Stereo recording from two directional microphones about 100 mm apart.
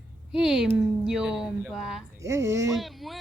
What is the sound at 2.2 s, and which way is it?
Speech, 30° right (ahead or behind).